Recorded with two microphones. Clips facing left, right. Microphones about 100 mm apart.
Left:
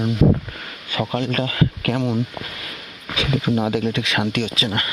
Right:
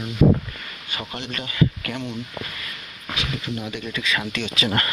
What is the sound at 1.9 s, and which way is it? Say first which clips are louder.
Speech: left 12 dB; 35° left (ahead or behind).